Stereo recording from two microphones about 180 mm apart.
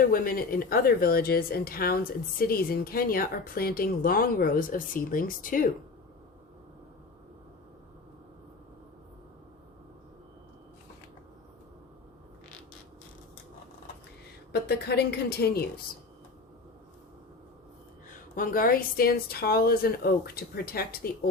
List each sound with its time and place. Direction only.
0.0 s a woman's voice: 55° left (ahead or behind)
14.5 s a woman's voice: 65° left (ahead or behind)
18.1 s a woman's voice: 50° left (ahead or behind)